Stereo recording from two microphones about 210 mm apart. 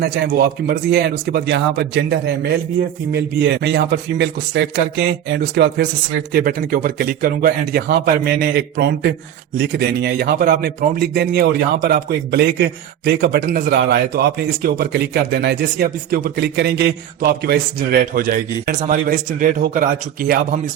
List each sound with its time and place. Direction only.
0.0 s a man's voice: 50° right (ahead or behind)